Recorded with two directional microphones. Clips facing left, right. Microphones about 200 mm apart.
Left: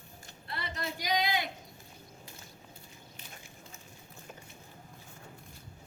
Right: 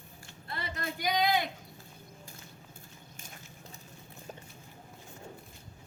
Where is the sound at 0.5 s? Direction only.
50° right (ahead or behind).